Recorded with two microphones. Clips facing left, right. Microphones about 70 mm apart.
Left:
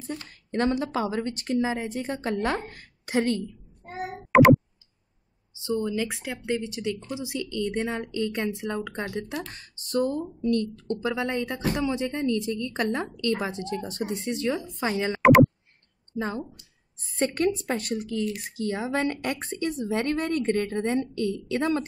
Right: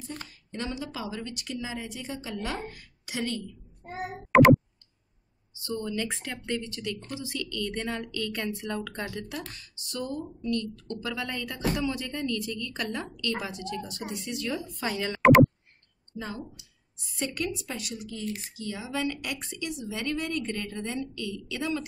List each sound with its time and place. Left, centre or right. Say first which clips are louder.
0.3 s a sound: left 12 dB; left
0.8 s speech: left 8 dB; left
4.3 s clicking: left 1 dB; centre
5.6 s speech: left 5 dB; left
6.0 s speech: left 4 dB; centre; by 9.4 s left
9.5 s speech: left 10 dB; left
15.2 s a sound: left 1 dB; centre
16.2 s speech: left 7 dB; left